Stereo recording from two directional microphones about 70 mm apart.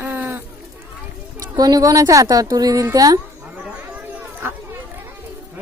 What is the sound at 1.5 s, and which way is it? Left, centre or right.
Speech, right.